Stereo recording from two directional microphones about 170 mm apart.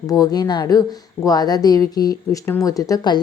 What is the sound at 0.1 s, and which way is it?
A woman's voice, 20° left (ahead or behind).